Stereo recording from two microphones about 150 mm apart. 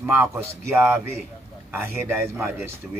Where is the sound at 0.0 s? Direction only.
15° right (ahead or behind).